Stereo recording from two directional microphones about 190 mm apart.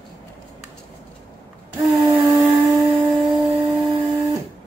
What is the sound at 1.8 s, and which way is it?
Humming, centre (ahead or behind).